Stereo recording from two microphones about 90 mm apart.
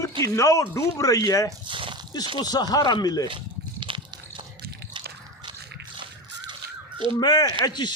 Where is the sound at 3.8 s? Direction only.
70° right (ahead or behind).